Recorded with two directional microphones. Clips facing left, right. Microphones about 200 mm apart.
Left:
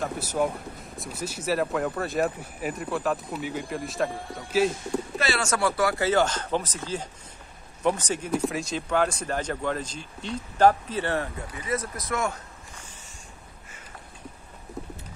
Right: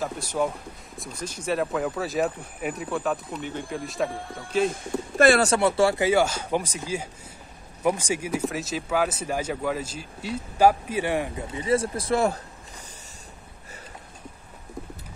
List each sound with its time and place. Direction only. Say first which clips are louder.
0.0 s speech: even; 5° left (ahead or behind)
5.1 s speech: right 13 dB; 50° right (ahead or behind)
5.4 s speech: right 4 dB; 25° right (ahead or behind)
6.0 s speech: right 2 dB; 10° right (ahead or behind); by 12.4 s 30° right (ahead or behind)